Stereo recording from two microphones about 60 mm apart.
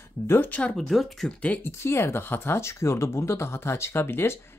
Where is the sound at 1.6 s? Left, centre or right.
Left.